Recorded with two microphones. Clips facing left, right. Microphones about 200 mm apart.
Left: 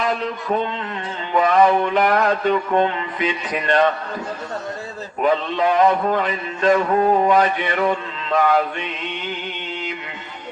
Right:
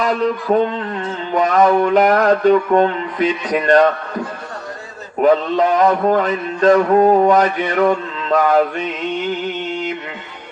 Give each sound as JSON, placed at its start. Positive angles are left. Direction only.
{"t": 0.5, "sound": "mantra", "side_deg": -45}
{"t": 5.2, "sound": "mantra", "side_deg": -45}